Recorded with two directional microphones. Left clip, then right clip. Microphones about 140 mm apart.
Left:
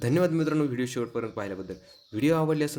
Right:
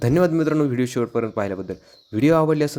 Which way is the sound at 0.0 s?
40° right (ahead or behind).